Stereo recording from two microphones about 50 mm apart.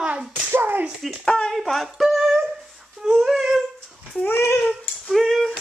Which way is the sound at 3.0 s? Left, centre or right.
Centre.